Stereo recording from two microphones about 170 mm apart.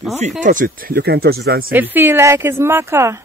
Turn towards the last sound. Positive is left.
turn(degrees=-15)  # may be behind; listen again after turning